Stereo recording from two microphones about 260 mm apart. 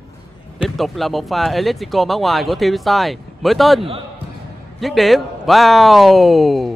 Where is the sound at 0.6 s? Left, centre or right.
Centre.